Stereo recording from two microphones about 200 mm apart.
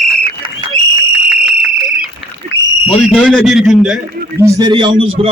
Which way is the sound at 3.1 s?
Centre (ahead or behind).